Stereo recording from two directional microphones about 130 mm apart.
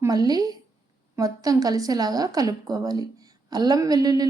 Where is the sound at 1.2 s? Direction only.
25° right (ahead or behind).